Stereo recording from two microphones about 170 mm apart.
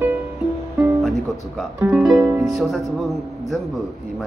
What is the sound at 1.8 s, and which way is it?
Speech, 10° right (ahead or behind).